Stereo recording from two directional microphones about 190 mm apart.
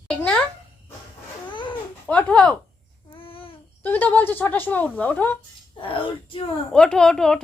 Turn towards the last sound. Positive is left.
turn(degrees=5)  # may be behind; listen again after turning